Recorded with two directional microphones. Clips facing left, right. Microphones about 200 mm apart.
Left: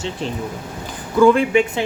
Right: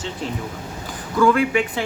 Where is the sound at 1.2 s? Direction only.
25° left (ahead or behind).